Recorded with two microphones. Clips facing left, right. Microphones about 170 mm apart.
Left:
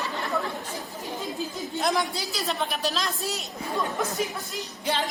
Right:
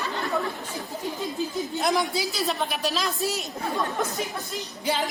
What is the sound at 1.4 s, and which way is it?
Speech, centre (ahead or behind).